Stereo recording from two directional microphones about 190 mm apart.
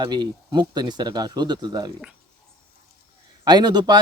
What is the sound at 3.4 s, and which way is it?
Speech, 20° right (ahead or behind).